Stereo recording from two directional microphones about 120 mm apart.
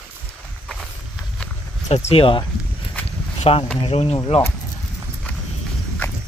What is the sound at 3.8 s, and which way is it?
Speech, 60° left (ahead or behind).